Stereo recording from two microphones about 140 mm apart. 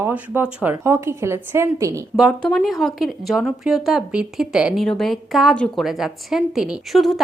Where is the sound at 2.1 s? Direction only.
Centre (ahead or behind).